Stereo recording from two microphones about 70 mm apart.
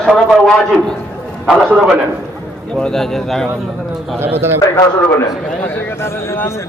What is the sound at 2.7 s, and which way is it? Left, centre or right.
Speech, centre.